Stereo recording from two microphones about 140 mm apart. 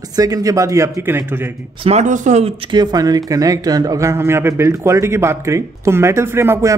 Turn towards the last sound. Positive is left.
turn(degrees=-15)  # may be behind; listen again after turning